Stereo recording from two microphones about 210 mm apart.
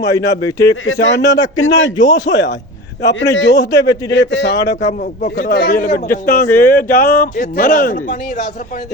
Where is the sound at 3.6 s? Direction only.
15° left (ahead or behind).